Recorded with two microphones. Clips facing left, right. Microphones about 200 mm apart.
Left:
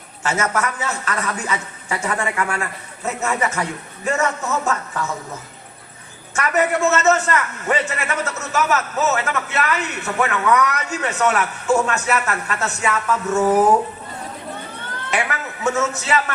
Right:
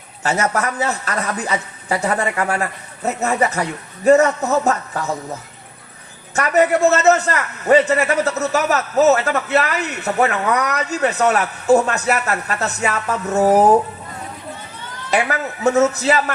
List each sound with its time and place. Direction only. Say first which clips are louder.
0.2 s a man's voice: right 2 dB; 35° right (ahead or behind)
6.3 s a man's voice: right 4 dB; 35° right (ahead or behind)
14.8 s cat: left 2 dB; 55° left (ahead or behind)
15.1 s a man's voice: right 5 dB; 35° right (ahead or behind)